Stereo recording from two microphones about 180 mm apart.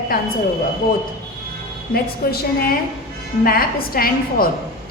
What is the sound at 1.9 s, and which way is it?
Speech, 55° left (ahead or behind).